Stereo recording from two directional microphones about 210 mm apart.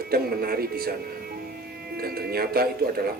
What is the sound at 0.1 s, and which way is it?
Speech, 45° right (ahead or behind).